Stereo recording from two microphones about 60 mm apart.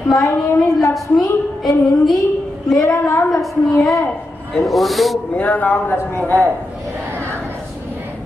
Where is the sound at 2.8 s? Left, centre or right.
Left.